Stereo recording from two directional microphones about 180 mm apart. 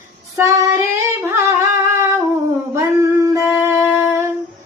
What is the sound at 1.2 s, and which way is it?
Singing, 15° right (ahead or behind).